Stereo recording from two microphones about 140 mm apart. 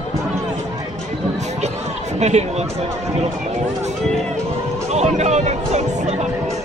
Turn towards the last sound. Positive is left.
turn(degrees=-55)  # may be behind; listen again after turning